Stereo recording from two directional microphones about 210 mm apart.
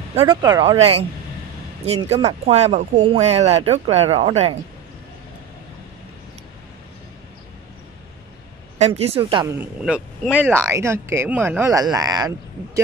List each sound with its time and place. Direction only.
0.3 s speech: 20° right (ahead or behind)
8.7 s speech: 30° right (ahead or behind)
9.6 s speech: 5° right (ahead or behind)